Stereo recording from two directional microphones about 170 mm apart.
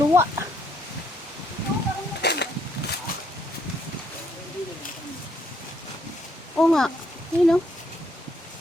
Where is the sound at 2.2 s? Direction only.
75° left (ahead or behind).